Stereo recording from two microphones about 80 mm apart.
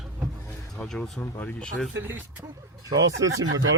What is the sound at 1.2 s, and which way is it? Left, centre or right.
Speech, centre.